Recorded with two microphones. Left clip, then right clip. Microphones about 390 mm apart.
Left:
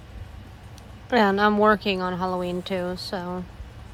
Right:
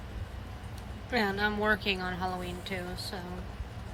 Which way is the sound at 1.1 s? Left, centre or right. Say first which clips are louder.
Left 10 dB; centre.